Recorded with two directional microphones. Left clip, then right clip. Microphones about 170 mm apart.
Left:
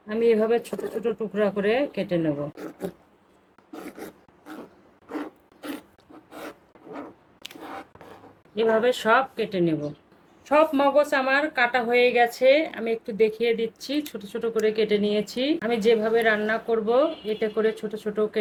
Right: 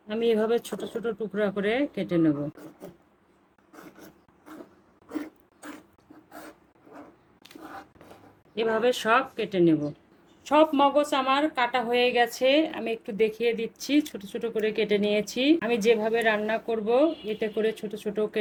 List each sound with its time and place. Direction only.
0.1 s speech: 35° right (ahead or behind)
3.7 s a sound: 25° left (ahead or behind)
5.0 s filing: 10° left (ahead or behind)
6.3 s rub: 20° left (ahead or behind)
8.5 s speech: 30° right (ahead or behind)